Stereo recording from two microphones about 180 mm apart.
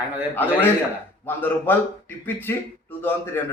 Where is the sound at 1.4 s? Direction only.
10° left (ahead or behind).